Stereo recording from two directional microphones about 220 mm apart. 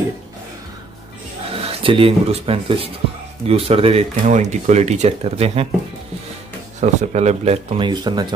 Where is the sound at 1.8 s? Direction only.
25° right (ahead or behind).